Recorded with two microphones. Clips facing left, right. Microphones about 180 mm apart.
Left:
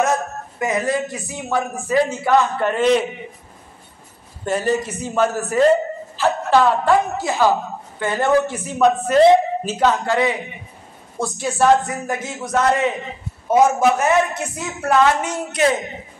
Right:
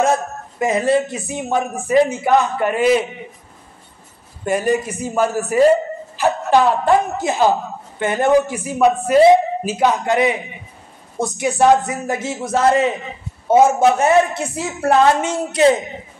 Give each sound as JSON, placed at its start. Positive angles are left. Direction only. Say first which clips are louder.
{"t": 0.0, "sound": "a man's voice", "louder": "right 2 dB", "side_deg": -30}
{"t": 4.5, "sound": "a man's voice", "louder": "right 2 dB", "side_deg": -15}